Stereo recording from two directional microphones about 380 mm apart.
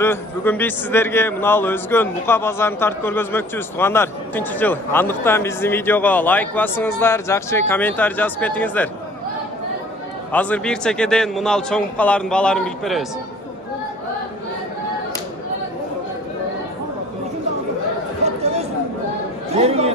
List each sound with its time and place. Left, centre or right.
0.0 s a man's voice: centre
10.3 s a man's voice: centre
18.2 s chatter: centre
19.5 s speech: centre